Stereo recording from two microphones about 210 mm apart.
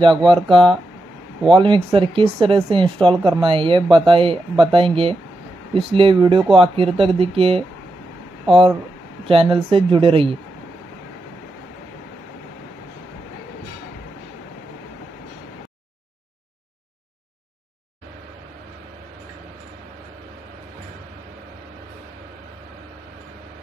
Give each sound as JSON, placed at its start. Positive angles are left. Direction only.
{"t": 0.0, "sound": "speech", "side_deg": -25}